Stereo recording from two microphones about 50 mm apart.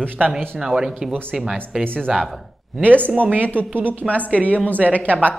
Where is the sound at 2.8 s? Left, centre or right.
Right.